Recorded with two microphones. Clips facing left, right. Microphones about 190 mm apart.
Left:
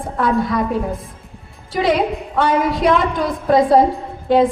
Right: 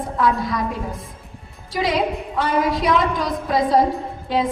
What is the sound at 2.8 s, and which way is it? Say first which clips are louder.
Speech: left 3 dB; 55° left (ahead or behind).